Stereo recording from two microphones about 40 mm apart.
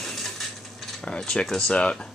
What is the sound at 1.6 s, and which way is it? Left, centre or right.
Speech, left.